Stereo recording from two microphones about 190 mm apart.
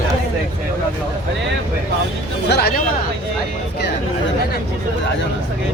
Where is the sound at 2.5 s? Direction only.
55° left (ahead or behind).